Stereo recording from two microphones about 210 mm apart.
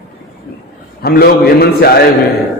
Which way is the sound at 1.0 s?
45° left (ahead or behind).